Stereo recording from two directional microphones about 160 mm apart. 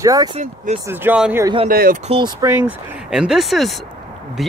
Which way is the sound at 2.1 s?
30° right (ahead or behind).